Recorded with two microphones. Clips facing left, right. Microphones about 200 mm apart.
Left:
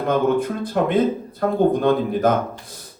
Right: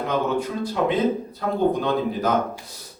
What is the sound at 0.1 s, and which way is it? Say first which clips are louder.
Speech: left 6 dB; 50° left (ahead or behind).